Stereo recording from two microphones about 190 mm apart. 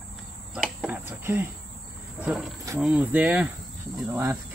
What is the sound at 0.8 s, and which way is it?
Cricket, 10° right (ahead or behind).